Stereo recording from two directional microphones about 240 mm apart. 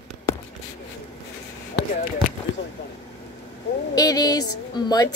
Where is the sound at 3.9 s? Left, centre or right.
Centre.